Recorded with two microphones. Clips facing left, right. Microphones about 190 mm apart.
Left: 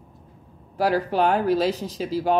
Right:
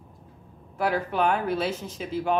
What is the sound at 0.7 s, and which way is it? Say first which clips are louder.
Speech: left 4 dB; 35° left (ahead or behind).